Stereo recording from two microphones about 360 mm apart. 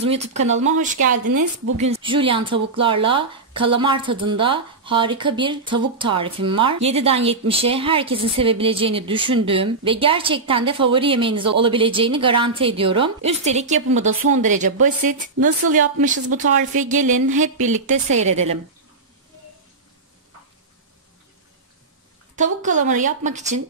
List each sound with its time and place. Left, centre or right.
0.1 s a woman's voice: centre
1.1 s a woman's voice: right
1.8 s speech: centre
15.4 s a woman's voice: right
15.7 s a woman's voice: right
22.3 s a woman's voice: right